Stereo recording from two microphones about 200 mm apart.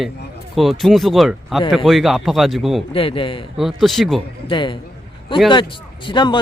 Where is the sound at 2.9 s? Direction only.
25° left (ahead or behind).